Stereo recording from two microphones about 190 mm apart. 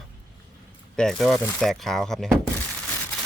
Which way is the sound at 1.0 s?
Centre (ahead or behind).